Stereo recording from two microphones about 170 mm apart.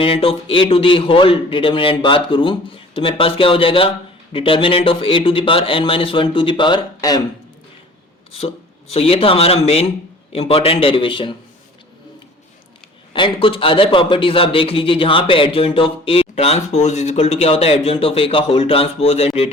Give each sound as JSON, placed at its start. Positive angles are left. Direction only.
{"t": 0.0, "sound": "a man's voice", "side_deg": 35}
{"t": 8.4, "sound": "a man's voice", "side_deg": 35}
{"t": 13.1, "sound": "a man's voice", "side_deg": 30}